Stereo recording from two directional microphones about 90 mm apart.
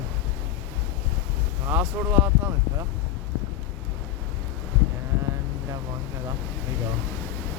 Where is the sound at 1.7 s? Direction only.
20° right (ahead or behind).